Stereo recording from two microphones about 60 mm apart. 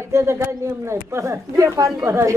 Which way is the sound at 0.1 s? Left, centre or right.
Right.